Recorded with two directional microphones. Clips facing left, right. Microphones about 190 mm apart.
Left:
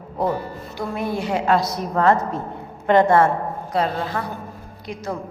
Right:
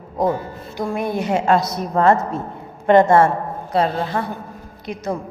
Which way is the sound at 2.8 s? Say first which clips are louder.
Right 3 dB; 50° right (ahead or behind).